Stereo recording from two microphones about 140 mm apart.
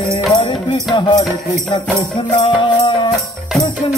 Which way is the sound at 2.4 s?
35° left (ahead or behind).